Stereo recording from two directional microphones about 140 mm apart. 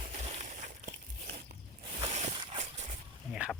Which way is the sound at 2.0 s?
45° right (ahead or behind).